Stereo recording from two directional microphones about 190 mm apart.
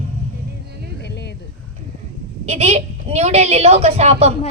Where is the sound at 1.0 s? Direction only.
60° left (ahead or behind).